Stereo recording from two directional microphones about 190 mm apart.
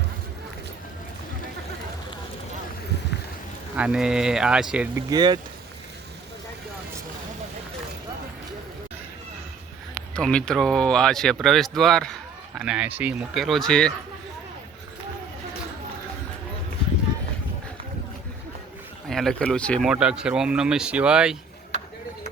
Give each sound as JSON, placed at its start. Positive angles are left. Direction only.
{"t": 3.8, "sound": "speech", "side_deg": -5}
{"t": 5.0, "sound": "speech", "side_deg": -20}
{"t": 10.2, "sound": "speech", "side_deg": 5}
{"t": 19.0, "sound": "speech", "side_deg": 0}
{"t": 19.9, "sound": "speech", "side_deg": -5}